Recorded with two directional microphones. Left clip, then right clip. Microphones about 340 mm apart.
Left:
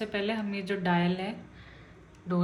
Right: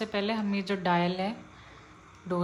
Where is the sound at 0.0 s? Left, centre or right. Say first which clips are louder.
Right 1 dB; centre.